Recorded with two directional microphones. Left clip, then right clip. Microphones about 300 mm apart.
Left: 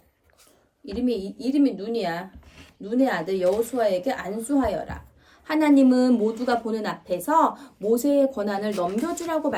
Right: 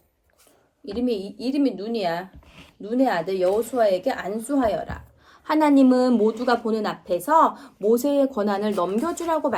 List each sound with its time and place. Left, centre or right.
0.9 s speech: centre